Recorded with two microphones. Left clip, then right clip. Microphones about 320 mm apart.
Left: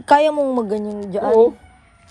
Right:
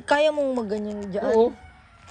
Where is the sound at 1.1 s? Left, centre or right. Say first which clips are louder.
Left 7 dB; centre.